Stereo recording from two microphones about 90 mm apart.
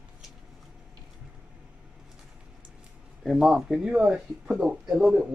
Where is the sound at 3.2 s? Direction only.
5° right (ahead or behind).